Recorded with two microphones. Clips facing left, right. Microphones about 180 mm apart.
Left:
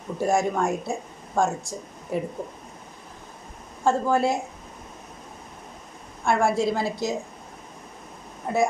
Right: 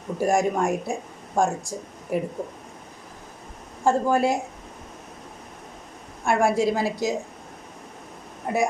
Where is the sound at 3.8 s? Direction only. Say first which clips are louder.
Right 1 dB; 15° right (ahead or behind).